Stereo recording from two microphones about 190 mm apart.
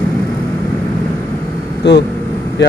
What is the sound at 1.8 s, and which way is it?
Speech, 65° left (ahead or behind).